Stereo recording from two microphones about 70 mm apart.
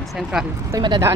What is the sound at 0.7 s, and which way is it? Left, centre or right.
Speech, right.